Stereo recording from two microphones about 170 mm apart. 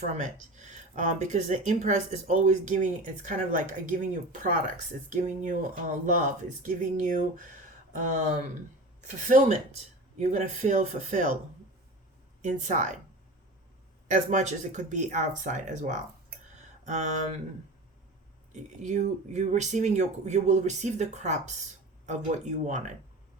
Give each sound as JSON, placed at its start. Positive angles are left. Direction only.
{"t": 0.1, "sound": "speech", "side_deg": -45}
{"t": 12.4, "sound": "speech", "side_deg": -45}
{"t": 14.1, "sound": "speech", "side_deg": -45}
{"t": 18.5, "sound": "speech", "side_deg": -45}